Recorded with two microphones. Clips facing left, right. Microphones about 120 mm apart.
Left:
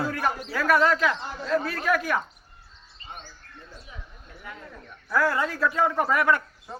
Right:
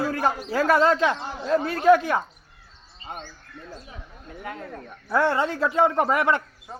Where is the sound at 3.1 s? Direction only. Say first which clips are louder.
Right 6 dB; 50° right (ahead or behind).